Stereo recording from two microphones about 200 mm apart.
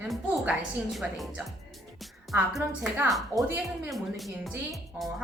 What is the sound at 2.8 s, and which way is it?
A woman's voice, centre (ahead or behind).